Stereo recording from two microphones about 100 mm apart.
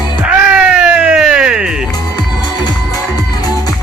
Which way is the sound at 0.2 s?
10° right (ahead or behind).